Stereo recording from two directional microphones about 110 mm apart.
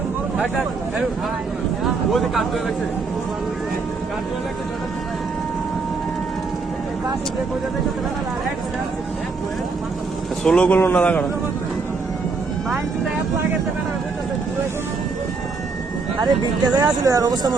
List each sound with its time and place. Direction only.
1.8 s a man's voice: centre (ahead or behind)
10.4 s a man's voice: 10° left (ahead or behind)
16.2 s speech: 40° right (ahead or behind)